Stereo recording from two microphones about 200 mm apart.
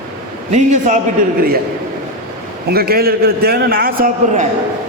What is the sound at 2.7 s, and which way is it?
A man's voice, 50° right (ahead or behind).